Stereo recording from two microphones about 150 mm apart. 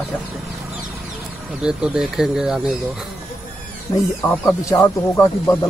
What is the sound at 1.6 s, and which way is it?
Speech, 5° right (ahead or behind).